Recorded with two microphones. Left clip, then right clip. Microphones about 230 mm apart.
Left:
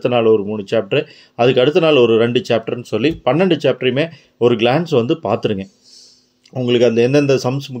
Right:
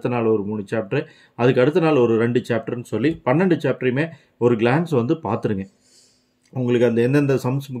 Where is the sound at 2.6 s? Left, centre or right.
Right.